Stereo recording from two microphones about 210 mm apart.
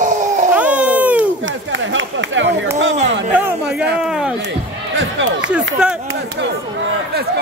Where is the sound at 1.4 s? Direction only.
65° right (ahead or behind).